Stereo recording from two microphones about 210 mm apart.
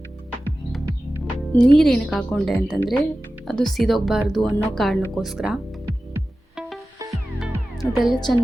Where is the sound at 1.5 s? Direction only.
5° left (ahead or behind).